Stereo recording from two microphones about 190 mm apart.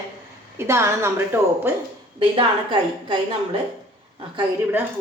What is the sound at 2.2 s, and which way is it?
Speech, 25° right (ahead or behind).